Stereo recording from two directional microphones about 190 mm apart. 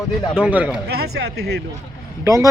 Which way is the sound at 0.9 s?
55° right (ahead or behind).